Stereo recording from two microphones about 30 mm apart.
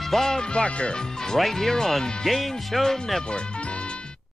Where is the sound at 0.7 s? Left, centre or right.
Left.